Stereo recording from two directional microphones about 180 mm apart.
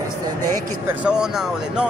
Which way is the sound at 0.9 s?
5° right (ahead or behind).